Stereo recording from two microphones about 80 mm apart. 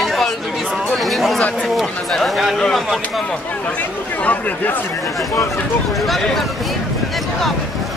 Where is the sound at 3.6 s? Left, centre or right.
Centre.